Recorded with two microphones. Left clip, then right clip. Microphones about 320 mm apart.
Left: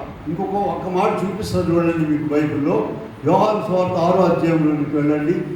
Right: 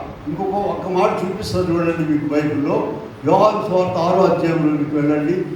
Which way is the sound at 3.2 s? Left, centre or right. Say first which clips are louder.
Right 2 dB; right.